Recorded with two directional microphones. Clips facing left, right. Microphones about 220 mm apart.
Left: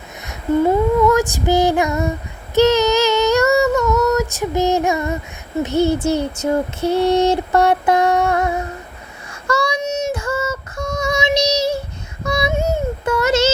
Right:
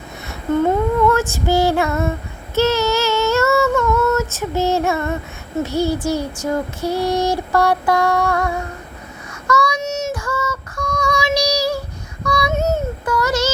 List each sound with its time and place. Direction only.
0.3 s female singing: 10° left (ahead or behind)
2.6 s child singing: 15° left (ahead or behind)
3.8 s female singing: centre (ahead or behind)
4.1 s female singing: 15° left (ahead or behind)
5.6 s child singing: 20° left (ahead or behind)
9.8 s synthetic singing: 15° left (ahead or behind)
12.2 s child singing: 25° left (ahead or behind)
12.5 s a sound: 10° left (ahead or behind)
13.1 s child singing: 25° left (ahead or behind)